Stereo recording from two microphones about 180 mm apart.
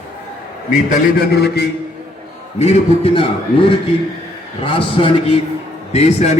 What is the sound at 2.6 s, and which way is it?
Speech, 35° left (ahead or behind).